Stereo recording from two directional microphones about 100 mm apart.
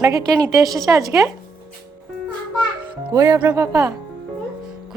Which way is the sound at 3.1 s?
35° right (ahead or behind).